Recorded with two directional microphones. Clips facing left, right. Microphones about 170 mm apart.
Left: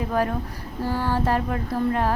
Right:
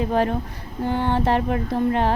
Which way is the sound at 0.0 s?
25° right (ahead or behind).